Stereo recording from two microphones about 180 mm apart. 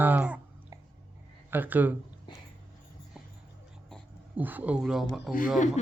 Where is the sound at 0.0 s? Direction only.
10° right (ahead or behind).